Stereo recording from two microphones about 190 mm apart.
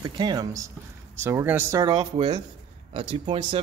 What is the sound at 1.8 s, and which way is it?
Speech, 25° right (ahead or behind).